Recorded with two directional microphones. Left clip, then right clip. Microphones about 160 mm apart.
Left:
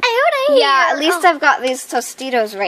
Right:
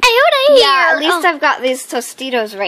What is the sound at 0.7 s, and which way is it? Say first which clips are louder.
A child's voice: right 2 dB; 10° left (ahead or behind).